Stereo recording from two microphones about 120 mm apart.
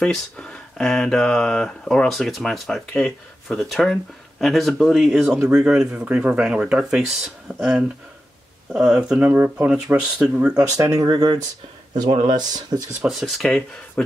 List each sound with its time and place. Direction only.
0.0 s speech: 5° left (ahead or behind)
8.7 s speech: 5° right (ahead or behind)
10.5 s speech: 30° right (ahead or behind)
13.0 s speech: centre (ahead or behind)